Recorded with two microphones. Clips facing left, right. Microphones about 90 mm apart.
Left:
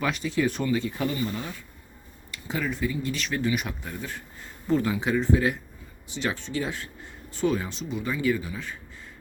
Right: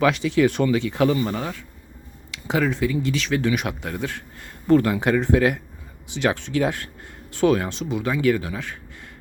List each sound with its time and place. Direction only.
0.0 s speech: 90° right; by 9.0 s 70° right (ahead or behind)